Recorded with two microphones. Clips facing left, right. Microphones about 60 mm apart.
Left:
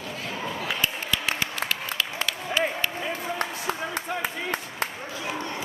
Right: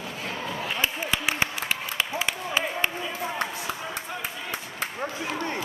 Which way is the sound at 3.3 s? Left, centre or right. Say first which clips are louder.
Left 1 dB; left.